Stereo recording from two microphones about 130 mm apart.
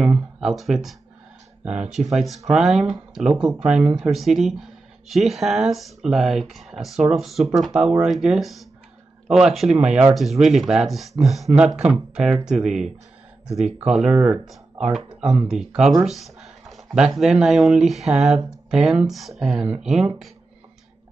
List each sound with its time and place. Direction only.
0.0 s a sound: 5° right (ahead or behind)
1.8 s speech: 65° right (ahead or behind)
2.0 s speech: centre (ahead or behind)